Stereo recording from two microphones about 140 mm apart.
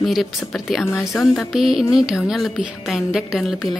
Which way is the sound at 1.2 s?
Centre (ahead or behind).